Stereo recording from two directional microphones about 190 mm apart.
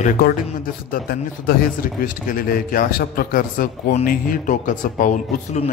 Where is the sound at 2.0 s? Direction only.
50° left (ahead or behind).